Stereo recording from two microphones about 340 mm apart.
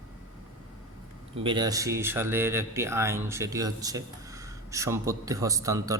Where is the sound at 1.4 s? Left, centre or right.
Centre.